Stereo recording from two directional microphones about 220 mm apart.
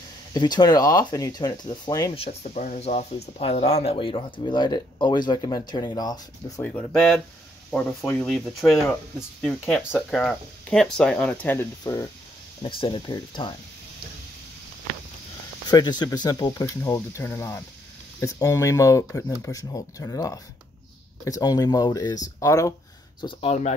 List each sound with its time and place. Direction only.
0.3 s speech: 20° left (ahead or behind)
15.7 s speech: 20° left (ahead or behind)
23.2 s speech: 25° left (ahead or behind)